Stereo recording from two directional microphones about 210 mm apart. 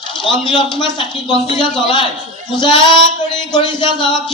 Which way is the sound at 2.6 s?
20° left (ahead or behind).